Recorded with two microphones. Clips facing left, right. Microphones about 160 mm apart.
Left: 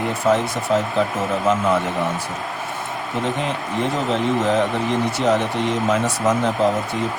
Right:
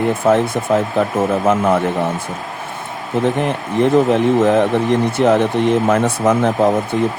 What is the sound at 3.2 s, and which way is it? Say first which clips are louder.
Speech: right 6 dB; 60° right (ahead or behind).